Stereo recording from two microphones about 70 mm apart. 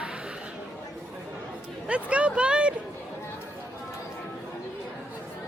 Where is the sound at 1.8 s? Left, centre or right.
Centre.